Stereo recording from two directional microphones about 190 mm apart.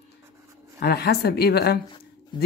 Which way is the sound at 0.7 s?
55° left (ahead or behind).